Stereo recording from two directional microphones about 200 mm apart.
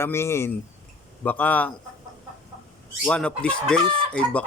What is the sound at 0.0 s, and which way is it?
A man's voice, 15° left (ahead or behind).